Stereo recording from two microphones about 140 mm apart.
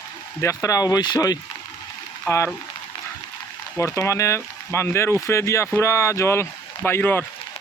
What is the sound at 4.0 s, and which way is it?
Speech, 20° left (ahead or behind).